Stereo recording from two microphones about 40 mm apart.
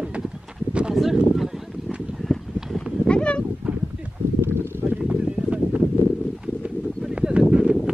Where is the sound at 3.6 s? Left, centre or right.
Right.